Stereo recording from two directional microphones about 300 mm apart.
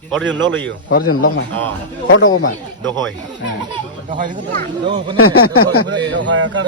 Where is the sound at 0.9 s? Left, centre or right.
Left.